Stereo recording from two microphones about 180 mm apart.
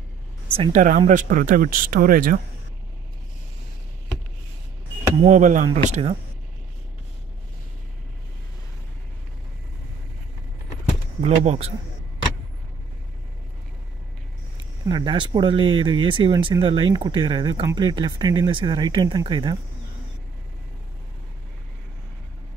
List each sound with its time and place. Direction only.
0.6 s speech: 45° right (ahead or behind)
5.2 s speech: 45° right (ahead or behind)
11.1 s speech: 35° right (ahead or behind)
14.9 s speech: 25° right (ahead or behind)